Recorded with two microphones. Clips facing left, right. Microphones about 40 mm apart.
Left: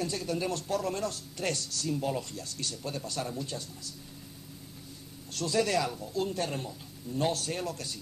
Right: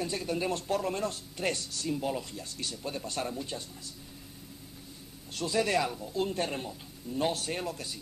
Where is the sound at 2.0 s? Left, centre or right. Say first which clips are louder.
Left 1 dB; centre.